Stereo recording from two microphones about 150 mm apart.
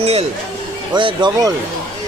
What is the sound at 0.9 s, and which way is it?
Speech, 30° right (ahead or behind).